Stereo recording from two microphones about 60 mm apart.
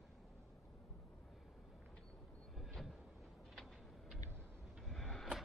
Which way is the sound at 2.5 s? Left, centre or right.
Centre.